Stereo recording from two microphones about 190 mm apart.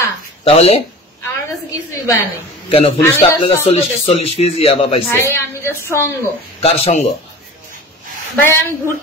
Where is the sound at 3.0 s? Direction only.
10° left (ahead or behind).